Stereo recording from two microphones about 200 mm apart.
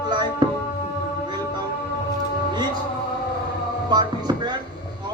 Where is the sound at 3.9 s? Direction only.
20° right (ahead or behind).